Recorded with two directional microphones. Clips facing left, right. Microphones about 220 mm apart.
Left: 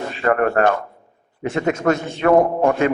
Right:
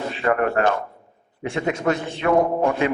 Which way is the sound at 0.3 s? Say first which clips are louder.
Left 3 dB; 45° left (ahead or behind).